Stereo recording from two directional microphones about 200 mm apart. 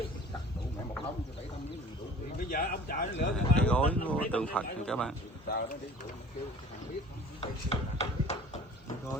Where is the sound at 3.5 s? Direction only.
5° left (ahead or behind).